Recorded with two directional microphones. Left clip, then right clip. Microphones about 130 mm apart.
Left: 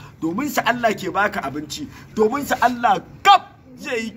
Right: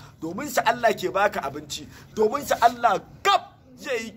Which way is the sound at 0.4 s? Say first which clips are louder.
Left 2 dB; 25° right (ahead or behind).